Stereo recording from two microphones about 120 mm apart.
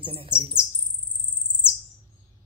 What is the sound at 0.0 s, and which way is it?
Speech, 45° right (ahead or behind).